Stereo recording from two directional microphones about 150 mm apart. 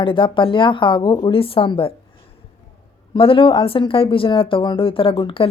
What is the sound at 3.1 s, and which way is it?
A woman's voice, 35° left (ahead or behind).